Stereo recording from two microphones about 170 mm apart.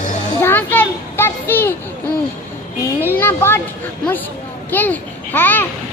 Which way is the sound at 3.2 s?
15° left (ahead or behind).